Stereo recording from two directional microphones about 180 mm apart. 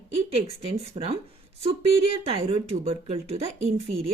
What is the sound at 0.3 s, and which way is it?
Speech, 35° right (ahead or behind).